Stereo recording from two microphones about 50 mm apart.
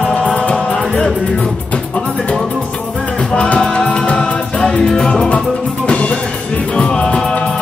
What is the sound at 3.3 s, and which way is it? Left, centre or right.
Music, left.